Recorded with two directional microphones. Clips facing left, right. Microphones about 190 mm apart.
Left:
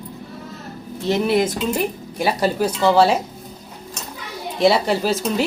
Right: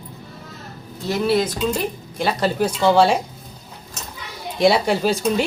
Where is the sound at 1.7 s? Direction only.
10° left (ahead or behind).